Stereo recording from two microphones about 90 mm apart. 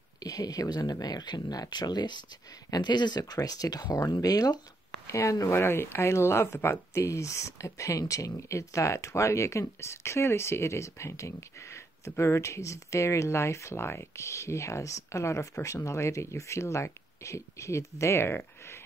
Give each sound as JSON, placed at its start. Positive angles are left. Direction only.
{"t": 0.2, "sound": "speech", "side_deg": 45}
{"t": 5.5, "sound": "speech", "side_deg": 25}